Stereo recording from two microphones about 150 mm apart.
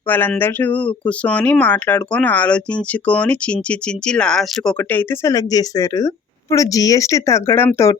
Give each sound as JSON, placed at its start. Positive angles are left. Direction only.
{"t": 0.1, "sound": "speech", "side_deg": 10}
{"t": 5.3, "sound": "speech", "side_deg": 25}